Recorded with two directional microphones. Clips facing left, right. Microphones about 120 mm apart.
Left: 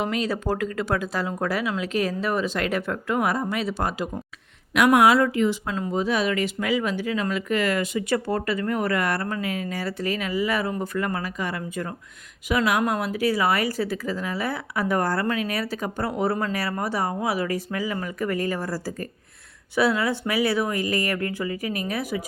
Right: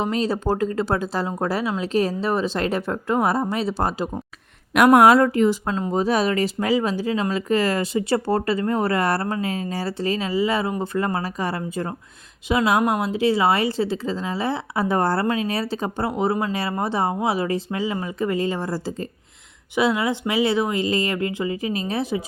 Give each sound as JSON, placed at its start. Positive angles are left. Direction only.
{"t": 0.0, "sound": "speech", "side_deg": -30}
{"t": 4.7, "sound": "speech", "side_deg": -45}